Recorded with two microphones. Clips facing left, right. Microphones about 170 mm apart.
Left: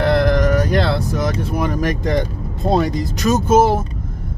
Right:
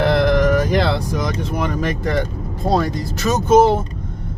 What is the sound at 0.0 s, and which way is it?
Speech, centre (ahead or behind).